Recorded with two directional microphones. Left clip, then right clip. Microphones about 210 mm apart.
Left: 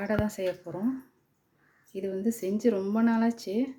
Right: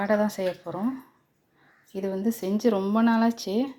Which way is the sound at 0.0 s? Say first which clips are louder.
Right 5 dB; 10° left (ahead or behind).